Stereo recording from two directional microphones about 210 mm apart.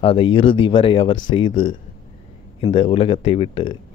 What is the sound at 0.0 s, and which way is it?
A man's voice, 25° left (ahead or behind).